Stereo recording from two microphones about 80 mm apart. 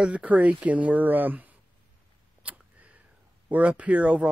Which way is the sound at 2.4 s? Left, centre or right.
Centre.